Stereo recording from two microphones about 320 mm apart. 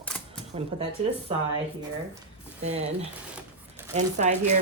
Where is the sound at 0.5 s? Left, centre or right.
Centre.